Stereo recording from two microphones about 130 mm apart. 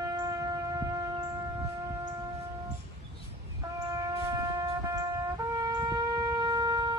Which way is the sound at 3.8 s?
25° right (ahead or behind).